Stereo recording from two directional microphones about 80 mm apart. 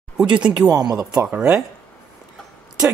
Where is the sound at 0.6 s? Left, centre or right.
Right.